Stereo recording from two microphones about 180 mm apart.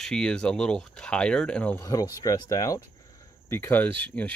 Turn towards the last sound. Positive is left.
turn(degrees=10)  # may be behind; listen again after turning